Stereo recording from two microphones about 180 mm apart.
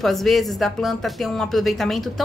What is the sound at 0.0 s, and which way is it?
Speech, centre (ahead or behind).